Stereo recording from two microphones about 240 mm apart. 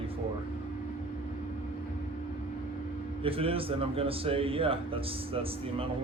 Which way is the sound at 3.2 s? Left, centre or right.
Right.